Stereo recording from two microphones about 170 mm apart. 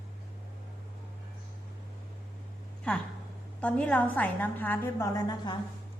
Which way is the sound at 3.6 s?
10° left (ahead or behind).